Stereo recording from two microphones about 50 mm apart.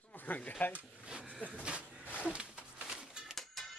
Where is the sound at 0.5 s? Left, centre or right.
Left.